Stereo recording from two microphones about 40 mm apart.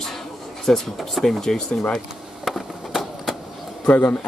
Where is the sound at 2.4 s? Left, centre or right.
Centre.